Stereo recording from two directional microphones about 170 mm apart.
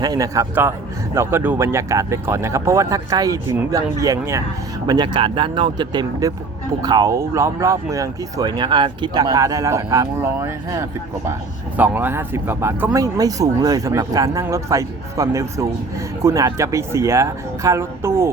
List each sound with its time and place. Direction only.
0.0 s speech: 20° right (ahead or behind)